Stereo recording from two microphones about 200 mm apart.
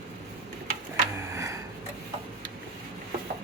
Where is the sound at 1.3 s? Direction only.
15° right (ahead or behind).